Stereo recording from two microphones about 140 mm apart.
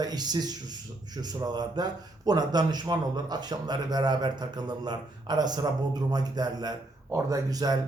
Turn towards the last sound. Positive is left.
turn(degrees=-25)  # may be behind; listen again after turning